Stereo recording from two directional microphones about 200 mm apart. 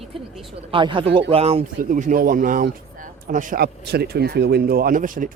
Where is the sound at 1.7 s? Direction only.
40° right (ahead or behind).